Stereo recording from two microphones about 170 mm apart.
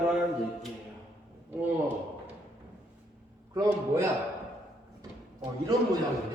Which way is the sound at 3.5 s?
15° right (ahead or behind).